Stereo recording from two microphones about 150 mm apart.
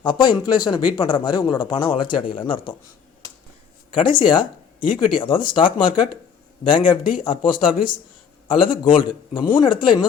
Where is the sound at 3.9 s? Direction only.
35° left (ahead or behind).